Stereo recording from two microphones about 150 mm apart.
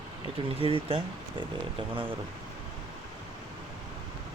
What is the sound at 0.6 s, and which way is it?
Speech, 40° right (ahead or behind).